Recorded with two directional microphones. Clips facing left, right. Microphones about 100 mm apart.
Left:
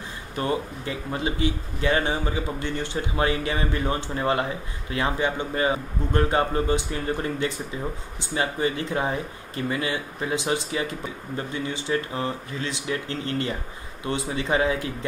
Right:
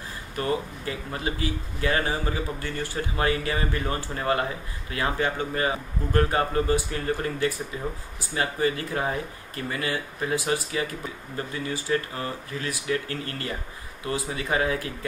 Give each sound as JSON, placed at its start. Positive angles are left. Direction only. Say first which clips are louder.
{"t": 0.4, "sound": "speech", "louder": "left 1 dB", "side_deg": 25}